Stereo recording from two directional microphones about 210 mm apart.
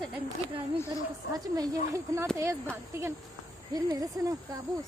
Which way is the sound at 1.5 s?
15° right (ahead or behind).